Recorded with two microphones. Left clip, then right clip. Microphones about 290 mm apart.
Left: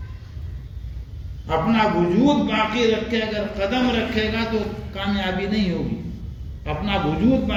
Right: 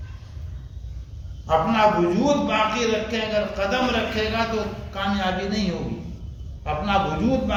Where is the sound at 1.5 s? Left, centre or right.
Right.